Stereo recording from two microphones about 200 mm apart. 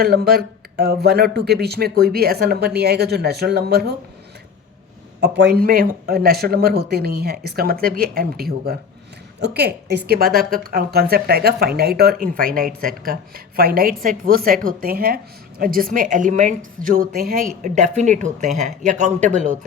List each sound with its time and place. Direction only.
0.0 s speech: 50° right (ahead or behind)
5.2 s a woman's voice: 55° right (ahead or behind); by 19.5 s 40° right (ahead or behind)